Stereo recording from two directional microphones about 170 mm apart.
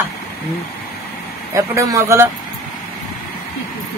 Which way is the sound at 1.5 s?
15° right (ahead or behind).